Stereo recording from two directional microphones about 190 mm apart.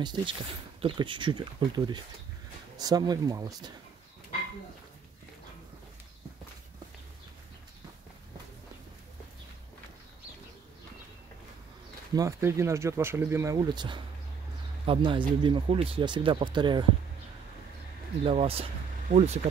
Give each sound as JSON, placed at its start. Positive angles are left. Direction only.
{"t": 0.0, "sound": "speech", "side_deg": -25}
{"t": 12.2, "sound": "speech", "side_deg": -15}
{"t": 18.2, "sound": "speech", "side_deg": -30}